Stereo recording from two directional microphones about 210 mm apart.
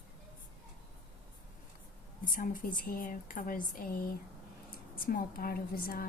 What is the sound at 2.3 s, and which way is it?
A woman's voice, 40° left (ahead or behind).